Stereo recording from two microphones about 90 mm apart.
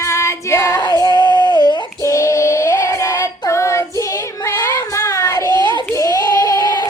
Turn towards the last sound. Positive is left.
turn(degrees=50)  # may be behind; listen again after turning